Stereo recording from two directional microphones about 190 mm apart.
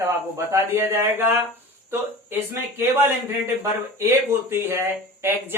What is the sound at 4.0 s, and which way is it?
Speech, 10° right (ahead or behind).